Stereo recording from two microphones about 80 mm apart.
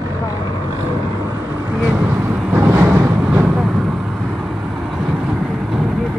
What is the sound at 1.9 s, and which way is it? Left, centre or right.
Speech, right.